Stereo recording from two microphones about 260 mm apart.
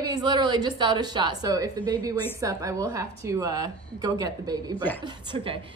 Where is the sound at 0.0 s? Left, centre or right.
Centre.